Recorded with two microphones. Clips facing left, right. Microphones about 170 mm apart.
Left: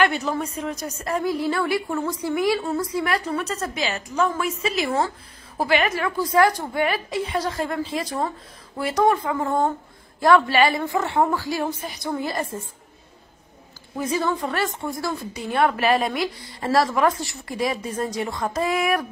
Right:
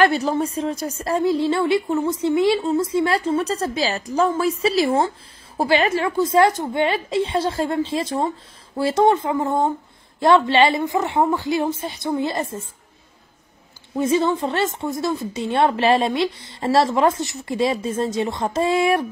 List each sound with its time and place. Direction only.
0.0 s a woman's voice: 35° right (ahead or behind)
13.9 s a woman's voice: 25° right (ahead or behind)